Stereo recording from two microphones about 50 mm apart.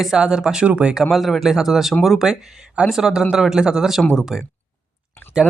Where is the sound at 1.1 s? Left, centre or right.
Centre.